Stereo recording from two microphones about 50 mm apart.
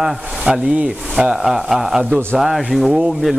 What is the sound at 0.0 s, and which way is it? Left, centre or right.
Speech, right.